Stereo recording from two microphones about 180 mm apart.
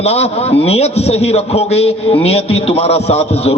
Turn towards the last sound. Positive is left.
turn(degrees=35)  # may be behind; listen again after turning